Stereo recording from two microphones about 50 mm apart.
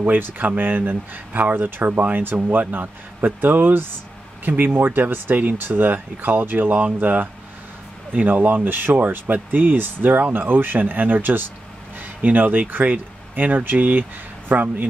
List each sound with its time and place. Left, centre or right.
0.0 s speech: right